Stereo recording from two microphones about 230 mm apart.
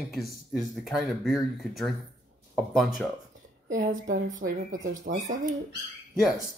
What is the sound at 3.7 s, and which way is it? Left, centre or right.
Speech, right.